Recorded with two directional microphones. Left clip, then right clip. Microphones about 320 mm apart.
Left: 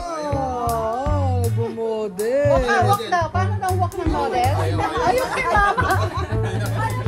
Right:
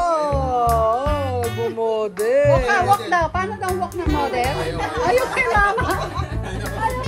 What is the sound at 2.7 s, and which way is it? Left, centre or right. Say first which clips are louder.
Music: right 1 dB; right.